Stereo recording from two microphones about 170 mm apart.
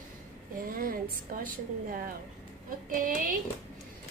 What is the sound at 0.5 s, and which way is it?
A woman's voice, 55° right (ahead or behind).